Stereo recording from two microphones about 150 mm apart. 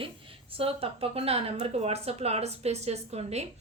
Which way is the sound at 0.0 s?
35° right (ahead or behind).